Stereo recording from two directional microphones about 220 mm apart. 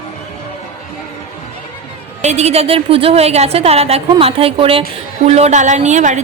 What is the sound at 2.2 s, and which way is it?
A woman's voice, 30° right (ahead or behind).